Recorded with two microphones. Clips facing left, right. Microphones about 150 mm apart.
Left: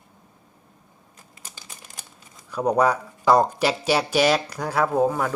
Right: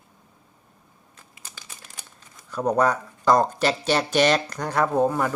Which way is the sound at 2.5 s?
10° left (ahead or behind).